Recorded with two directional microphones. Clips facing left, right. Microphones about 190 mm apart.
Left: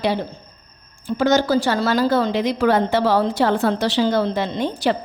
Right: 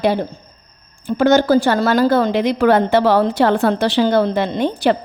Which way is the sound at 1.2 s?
55° right (ahead or behind).